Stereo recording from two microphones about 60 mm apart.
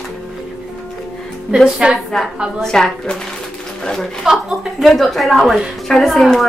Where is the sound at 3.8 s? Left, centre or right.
Centre.